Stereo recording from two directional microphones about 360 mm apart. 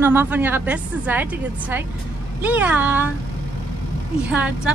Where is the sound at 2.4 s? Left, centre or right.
Centre.